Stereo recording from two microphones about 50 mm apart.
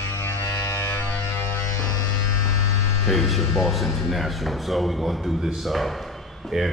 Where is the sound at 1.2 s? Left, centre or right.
Left.